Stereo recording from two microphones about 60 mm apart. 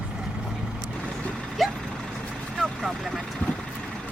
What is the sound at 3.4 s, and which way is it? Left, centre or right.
Vehicle, left.